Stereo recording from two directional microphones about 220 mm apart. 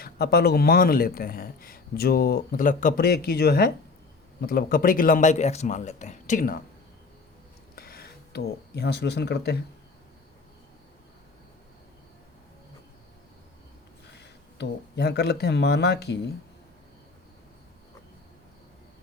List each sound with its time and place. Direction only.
0.0 s a man's voice: 45° left (ahead or behind)
7.8 s speech: 45° left (ahead or behind)
14.1 s speech: 50° left (ahead or behind)